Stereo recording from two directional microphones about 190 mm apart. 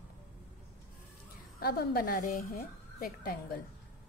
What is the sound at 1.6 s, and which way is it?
A woman's voice, 55° left (ahead or behind).